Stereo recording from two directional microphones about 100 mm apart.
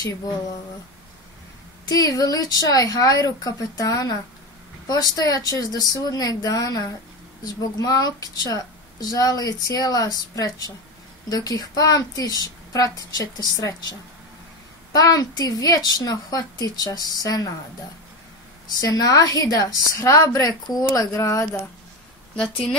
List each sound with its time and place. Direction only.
1.9 s speech: 35° left (ahead or behind)
18.9 s speech: 35° left (ahead or behind)